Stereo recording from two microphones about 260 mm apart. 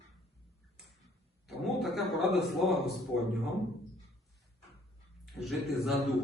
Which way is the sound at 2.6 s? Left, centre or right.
Centre.